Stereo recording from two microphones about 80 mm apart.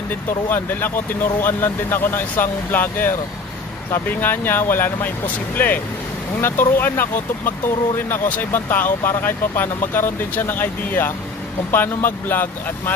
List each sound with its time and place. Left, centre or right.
0.5 s speech: left